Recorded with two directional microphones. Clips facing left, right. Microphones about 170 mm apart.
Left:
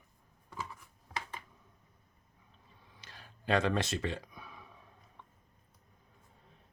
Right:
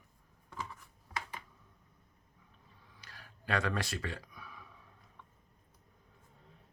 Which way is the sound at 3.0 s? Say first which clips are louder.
Left 5 dB; 25° left (ahead or behind).